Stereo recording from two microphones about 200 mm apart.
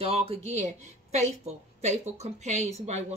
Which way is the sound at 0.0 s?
30° right (ahead or behind).